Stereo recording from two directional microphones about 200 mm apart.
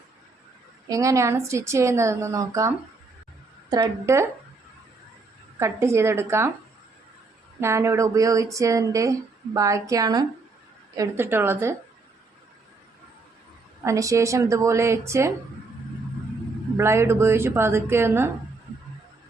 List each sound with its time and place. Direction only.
0.9 s a woman's voice: 15° right (ahead or behind)
5.5 s a woman's voice: 15° right (ahead or behind)
7.6 s a woman's voice: 15° right (ahead or behind)
13.8 s a woman's voice: 15° right (ahead or behind)
16.7 s a woman's voice: 15° right (ahead or behind)